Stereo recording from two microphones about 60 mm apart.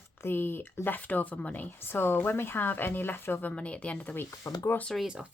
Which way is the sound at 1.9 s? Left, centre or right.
Left.